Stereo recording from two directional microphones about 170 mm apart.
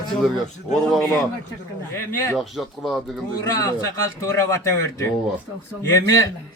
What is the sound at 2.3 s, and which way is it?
Speech, centre (ahead or behind).